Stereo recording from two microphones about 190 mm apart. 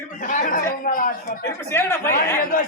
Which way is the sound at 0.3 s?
45° left (ahead or behind).